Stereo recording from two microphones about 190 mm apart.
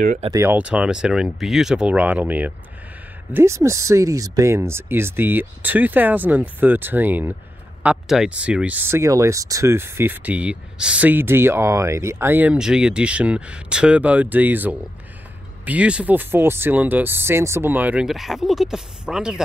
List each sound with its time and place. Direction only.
0.0 s speech: 40° right (ahead or behind)
0.3 s speech: 10° right (ahead or behind)